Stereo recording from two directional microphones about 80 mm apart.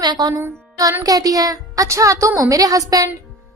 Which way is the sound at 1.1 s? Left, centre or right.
Right.